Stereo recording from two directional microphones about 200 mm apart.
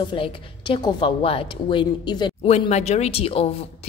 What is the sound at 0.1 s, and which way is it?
A woman's voice, 25° left (ahead or behind).